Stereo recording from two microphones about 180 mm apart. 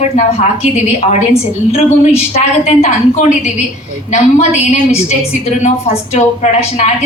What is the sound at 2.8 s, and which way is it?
A woman's voice, 40° left (ahead or behind).